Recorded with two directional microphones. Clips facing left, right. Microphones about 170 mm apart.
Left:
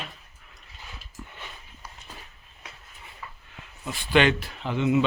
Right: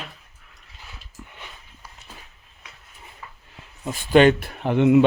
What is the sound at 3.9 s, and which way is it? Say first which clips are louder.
Speech: right 7 dB; 40° right (ahead or behind).